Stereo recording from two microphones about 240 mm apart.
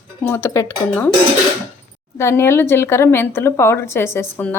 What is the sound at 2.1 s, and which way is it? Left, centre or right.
A woman's voice, centre.